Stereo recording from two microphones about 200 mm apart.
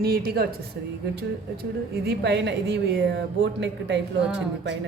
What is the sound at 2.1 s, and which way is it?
A woman's voice, 60° right (ahead or behind).